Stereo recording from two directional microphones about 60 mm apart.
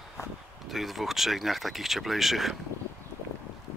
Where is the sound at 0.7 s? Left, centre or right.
Centre.